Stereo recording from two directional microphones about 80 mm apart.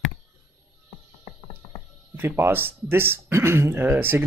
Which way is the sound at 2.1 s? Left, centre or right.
Right.